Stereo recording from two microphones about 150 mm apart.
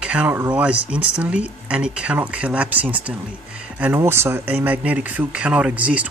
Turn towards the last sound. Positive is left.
turn(degrees=-10)  # may be behind; listen again after turning